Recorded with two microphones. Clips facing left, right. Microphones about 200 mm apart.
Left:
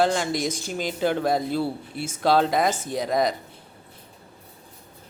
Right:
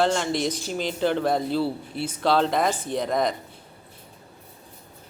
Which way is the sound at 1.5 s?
45° left (ahead or behind).